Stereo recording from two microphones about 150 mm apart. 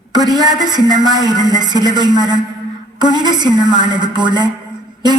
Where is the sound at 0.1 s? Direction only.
25° right (ahead or behind).